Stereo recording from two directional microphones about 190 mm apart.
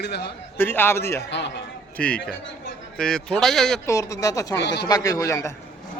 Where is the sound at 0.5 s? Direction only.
10° left (ahead or behind).